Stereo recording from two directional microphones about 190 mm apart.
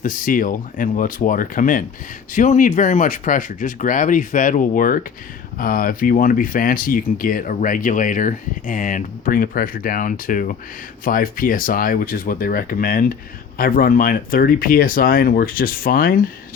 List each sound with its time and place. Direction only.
0.0 s speech: 45° left (ahead or behind)